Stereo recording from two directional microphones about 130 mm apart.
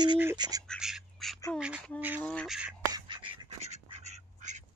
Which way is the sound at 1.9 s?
10° right (ahead or behind).